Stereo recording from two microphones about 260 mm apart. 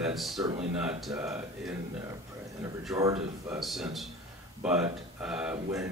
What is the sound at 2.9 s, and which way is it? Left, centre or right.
Speech, centre.